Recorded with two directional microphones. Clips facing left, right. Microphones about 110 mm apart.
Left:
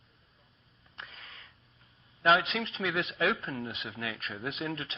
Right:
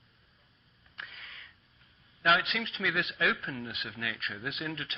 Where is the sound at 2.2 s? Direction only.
30° left (ahead or behind).